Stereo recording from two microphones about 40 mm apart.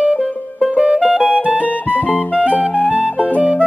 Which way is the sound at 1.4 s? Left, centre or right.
Right.